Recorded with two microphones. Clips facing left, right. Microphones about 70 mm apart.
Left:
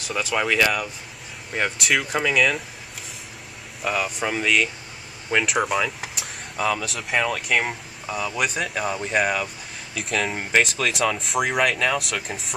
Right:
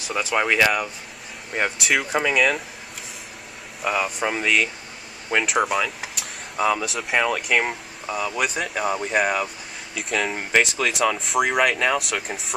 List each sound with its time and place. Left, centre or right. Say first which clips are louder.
0.4 s speech: right 2 dB; centre
1.5 s speech: even; centre
3.8 s speech: right 1 dB; centre
5.3 s vehicle: right 1 dB; centre
6.6 s speech: right 3 dB; centre